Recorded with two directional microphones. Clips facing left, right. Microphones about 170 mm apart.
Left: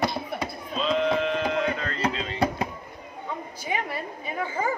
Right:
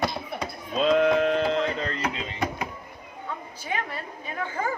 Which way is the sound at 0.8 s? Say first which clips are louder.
Right 4 dB; 50° right (ahead or behind).